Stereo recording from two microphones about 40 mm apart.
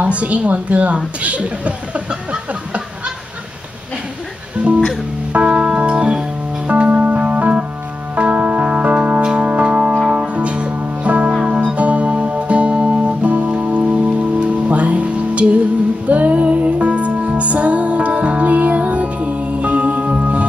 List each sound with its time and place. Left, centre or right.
0.0 s a woman's voice: right
5.3 s organ: right
6.7 s music: right
9.2 s music: right
9.5 s organ: right
10.0 s music: right